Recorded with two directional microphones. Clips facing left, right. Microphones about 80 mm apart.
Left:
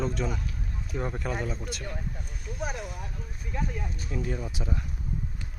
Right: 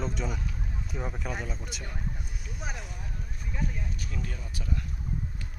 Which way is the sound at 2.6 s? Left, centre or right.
Centre.